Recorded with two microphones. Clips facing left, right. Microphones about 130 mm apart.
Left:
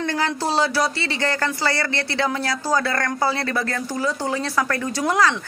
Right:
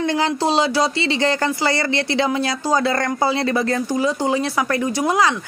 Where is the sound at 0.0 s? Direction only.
20° right (ahead or behind).